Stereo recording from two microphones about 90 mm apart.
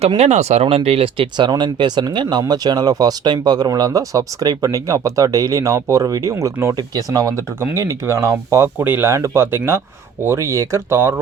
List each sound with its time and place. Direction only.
0.6 s speech: 90° right
1.5 s speech: 55° right (ahead or behind)
6.3 s speech: 30° right (ahead or behind)
6.7 s speech: 45° right (ahead or behind)
7.6 s speech: 30° right (ahead or behind)
8.8 s speech: 20° right (ahead or behind)
9.0 s speech: 35° right (ahead or behind)